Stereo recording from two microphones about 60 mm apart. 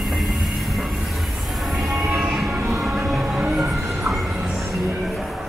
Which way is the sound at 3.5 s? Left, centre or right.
Centre.